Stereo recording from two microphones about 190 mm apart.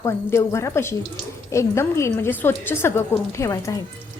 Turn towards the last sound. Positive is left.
turn(degrees=15)  # may be behind; listen again after turning